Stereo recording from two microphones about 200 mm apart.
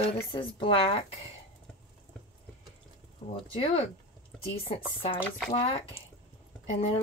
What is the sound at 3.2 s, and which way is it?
Speech, 30° left (ahead or behind).